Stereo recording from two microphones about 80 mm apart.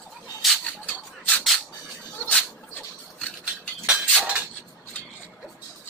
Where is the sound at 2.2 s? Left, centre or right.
Centre.